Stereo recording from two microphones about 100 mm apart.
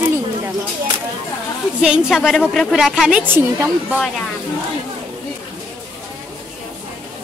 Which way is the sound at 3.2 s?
25° right (ahead or behind).